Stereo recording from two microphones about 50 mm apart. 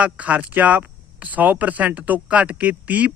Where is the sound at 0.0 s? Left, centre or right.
Right.